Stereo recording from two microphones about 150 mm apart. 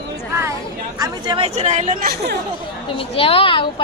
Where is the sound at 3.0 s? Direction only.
40° left (ahead or behind).